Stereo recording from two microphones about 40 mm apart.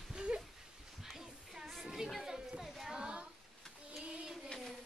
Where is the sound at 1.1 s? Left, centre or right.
Centre.